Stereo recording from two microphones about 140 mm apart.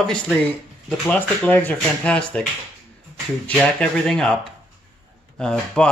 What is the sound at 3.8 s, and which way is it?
Speech, 5° left (ahead or behind).